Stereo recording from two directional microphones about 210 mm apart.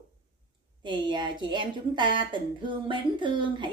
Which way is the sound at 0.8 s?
20° right (ahead or behind).